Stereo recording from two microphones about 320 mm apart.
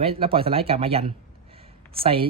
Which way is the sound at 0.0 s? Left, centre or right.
Centre.